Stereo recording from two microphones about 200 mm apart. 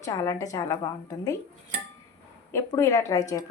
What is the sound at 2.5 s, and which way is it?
Speech, 15° left (ahead or behind).